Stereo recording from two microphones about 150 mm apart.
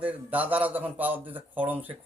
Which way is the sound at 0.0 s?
10° right (ahead or behind).